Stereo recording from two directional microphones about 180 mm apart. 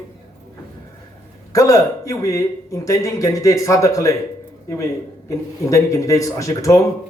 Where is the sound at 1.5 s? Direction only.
20° left (ahead or behind).